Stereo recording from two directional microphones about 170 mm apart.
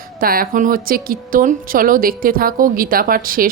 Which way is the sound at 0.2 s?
60° right (ahead or behind).